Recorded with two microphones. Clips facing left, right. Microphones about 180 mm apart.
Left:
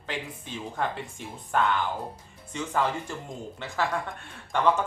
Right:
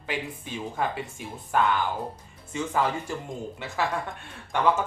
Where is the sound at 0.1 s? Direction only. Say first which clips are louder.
Right 3 dB; 10° right (ahead or behind).